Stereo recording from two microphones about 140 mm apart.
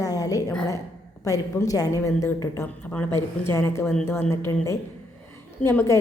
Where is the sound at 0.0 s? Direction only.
25° left (ahead or behind).